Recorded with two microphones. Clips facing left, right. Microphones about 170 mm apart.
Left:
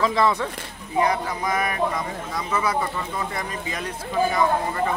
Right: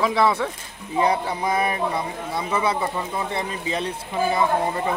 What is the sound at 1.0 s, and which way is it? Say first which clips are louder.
Speech: right 2 dB; 30° right (ahead or behind).